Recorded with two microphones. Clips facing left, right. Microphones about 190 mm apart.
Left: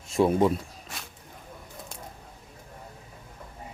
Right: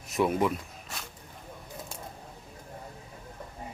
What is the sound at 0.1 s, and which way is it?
Speech, 30° left (ahead or behind).